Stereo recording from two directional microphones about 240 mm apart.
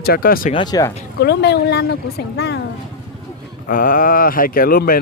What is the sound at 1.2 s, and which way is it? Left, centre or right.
Speech, left.